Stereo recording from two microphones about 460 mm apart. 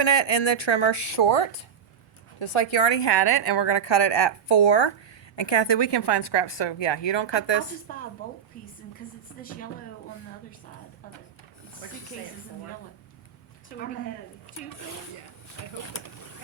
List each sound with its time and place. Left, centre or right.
0.0 s a woman's voice: left
7.9 s speech: centre
15.8 s speech: left